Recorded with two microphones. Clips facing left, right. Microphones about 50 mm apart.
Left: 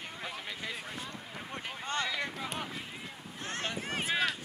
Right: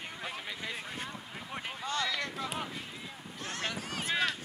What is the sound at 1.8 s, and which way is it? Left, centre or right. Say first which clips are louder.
Boat: even; left.